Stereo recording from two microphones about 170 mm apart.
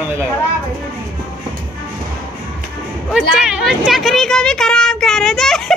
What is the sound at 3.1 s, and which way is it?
A woman's voice, 5° right (ahead or behind).